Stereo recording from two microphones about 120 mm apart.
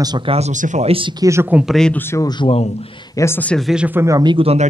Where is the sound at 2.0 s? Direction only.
20° left (ahead or behind).